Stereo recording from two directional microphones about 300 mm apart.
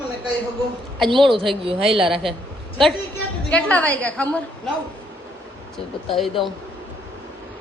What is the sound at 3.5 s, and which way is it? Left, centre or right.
Speech, centre.